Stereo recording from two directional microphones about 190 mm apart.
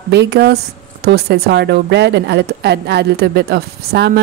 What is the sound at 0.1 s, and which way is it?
Speech, 60° right (ahead or behind).